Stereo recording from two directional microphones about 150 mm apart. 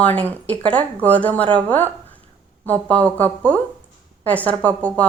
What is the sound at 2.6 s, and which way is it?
A woman's voice, 10° left (ahead or behind).